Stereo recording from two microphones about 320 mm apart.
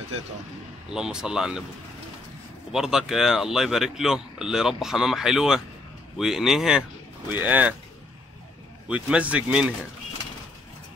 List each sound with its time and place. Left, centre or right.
0.9 s speech: centre
2.7 s speech: centre
8.8 s speech: centre